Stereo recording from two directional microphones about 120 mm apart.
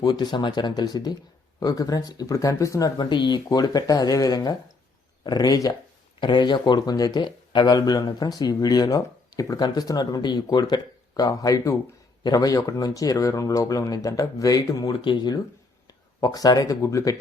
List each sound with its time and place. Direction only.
0.0 s speech: 40° left (ahead or behind)
3.0 s speech: 40° left (ahead or behind)